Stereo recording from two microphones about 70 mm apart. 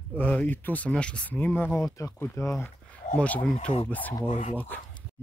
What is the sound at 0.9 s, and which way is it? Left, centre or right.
Speech, centre.